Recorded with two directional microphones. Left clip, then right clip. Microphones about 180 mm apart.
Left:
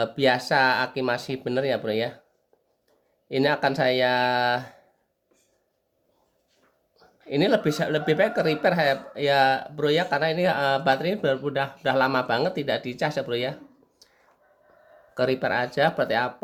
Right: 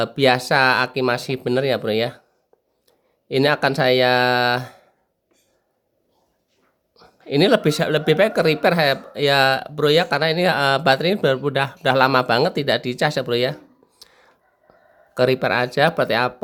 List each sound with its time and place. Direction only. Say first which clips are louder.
0.0 s speech: right 5 dB; 45° right (ahead or behind)
3.2 s speech: right 5 dB; 45° right (ahead or behind)
6.9 s speech: right 5 dB; 50° right (ahead or behind)
14.0 s whispering: right 11 dB; 50° right (ahead or behind)
15.1 s speech: right 6 dB; 45° right (ahead or behind)